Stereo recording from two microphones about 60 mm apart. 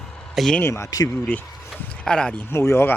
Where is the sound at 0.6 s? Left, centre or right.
Left.